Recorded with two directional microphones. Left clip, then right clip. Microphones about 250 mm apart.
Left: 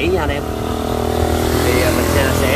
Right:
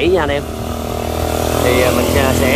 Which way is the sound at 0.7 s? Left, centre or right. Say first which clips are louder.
Left 2 dB; right.